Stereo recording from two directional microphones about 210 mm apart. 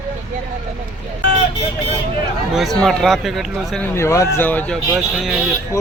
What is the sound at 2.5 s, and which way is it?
Speech, centre (ahead or behind).